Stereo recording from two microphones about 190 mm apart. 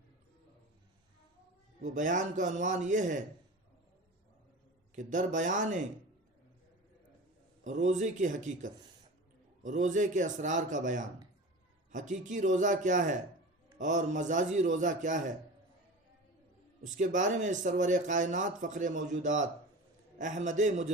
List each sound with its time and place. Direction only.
1.8 s speech: 40° right (ahead or behind)
4.9 s speech: 40° right (ahead or behind)
7.6 s speech: 40° right (ahead or behind)
16.8 s speech: 40° right (ahead or behind)